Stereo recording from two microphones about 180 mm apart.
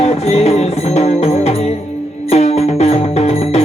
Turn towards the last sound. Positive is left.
turn(degrees=35)  # may be behind; listen again after turning